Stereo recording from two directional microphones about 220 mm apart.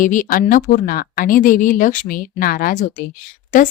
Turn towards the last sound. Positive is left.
turn(degrees=35)  # may be behind; listen again after turning